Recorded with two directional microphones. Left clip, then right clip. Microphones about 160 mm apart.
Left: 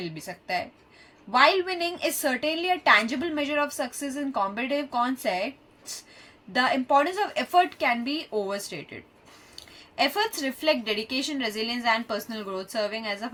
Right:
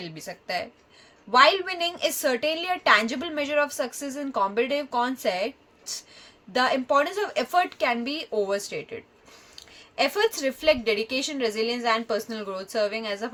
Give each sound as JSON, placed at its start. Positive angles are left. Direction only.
{"t": 0.0, "sound": "a woman's voice", "side_deg": -45}
{"t": 6.5, "sound": "a woman's voice", "side_deg": -40}